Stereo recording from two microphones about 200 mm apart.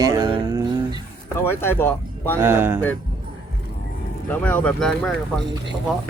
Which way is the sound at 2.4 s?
10° right (ahead or behind).